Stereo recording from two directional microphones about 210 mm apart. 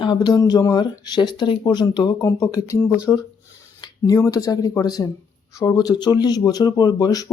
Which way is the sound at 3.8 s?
20° left (ahead or behind).